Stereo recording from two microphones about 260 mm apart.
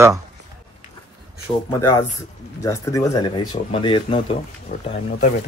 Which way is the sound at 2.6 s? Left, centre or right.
Centre.